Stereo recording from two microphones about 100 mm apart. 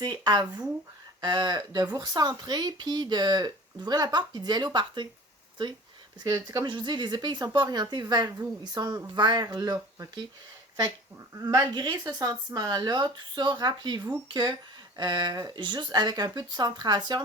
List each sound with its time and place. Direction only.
0.0 s speech: 45° right (ahead or behind)
6.2 s speech: 40° right (ahead or behind)
6.7 s speech: 50° right (ahead or behind)
11.3 s speech: 30° right (ahead or behind)
11.7 s speech: 45° right (ahead or behind)